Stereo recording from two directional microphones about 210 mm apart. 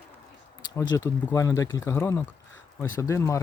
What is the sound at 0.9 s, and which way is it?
Speech, 15° left (ahead or behind).